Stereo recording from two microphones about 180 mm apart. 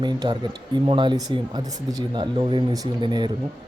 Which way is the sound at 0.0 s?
25° right (ahead or behind).